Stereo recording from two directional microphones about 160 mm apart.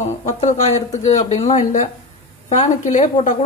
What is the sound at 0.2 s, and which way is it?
A woman's voice, 50° left (ahead or behind).